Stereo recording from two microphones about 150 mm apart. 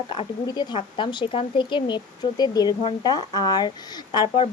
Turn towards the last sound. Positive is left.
turn(degrees=30)  # may be behind; listen again after turning